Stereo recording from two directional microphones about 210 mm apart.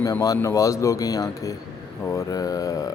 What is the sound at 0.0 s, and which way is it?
A man's voice, 15° left (ahead or behind).